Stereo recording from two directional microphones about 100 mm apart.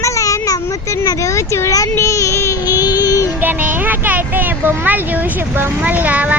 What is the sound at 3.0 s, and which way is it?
Music, 35° left (ahead or behind).